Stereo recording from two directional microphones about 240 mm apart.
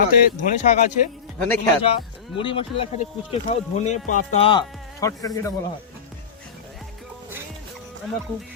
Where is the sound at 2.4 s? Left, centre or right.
Left.